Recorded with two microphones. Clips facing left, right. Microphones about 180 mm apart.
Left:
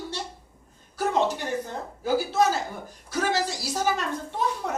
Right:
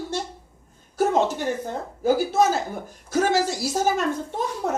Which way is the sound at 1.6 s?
50° right (ahead or behind).